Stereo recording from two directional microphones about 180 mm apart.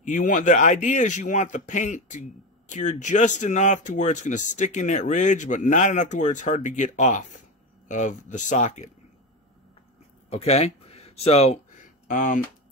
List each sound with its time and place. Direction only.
0.0 s speech: 45° left (ahead or behind)
10.3 s speech: 35° left (ahead or behind)